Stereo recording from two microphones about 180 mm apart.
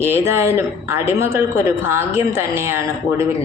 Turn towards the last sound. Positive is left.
turn(degrees=-15)  # may be behind; listen again after turning